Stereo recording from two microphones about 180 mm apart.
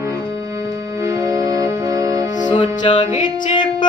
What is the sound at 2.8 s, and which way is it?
Music, 25° left (ahead or behind).